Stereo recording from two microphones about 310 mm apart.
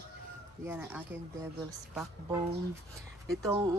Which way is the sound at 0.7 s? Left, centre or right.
Centre.